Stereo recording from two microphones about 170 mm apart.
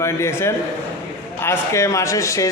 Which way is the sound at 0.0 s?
15° left (ahead or behind).